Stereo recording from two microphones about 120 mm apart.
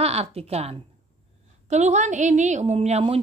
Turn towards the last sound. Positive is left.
turn(degrees=-60)  # may be behind; listen again after turning